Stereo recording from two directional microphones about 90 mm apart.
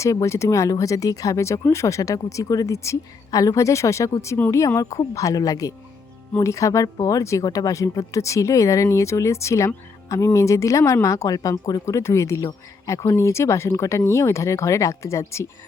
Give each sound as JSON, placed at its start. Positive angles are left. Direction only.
{"t": 0.0, "sound": "speech", "side_deg": 35}